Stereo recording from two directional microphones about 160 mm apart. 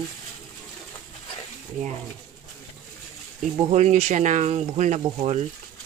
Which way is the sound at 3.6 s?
45° right (ahead or behind).